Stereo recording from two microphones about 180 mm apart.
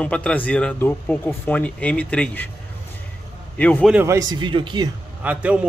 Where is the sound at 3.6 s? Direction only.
10° left (ahead or behind).